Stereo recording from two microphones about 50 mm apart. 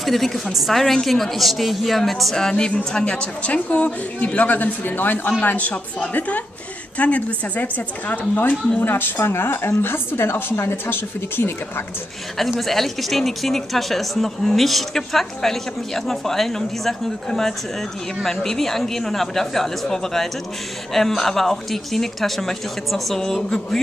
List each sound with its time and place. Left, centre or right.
0.0 s a woman's voice: centre; by 11.8 s left
12.4 s speech: centre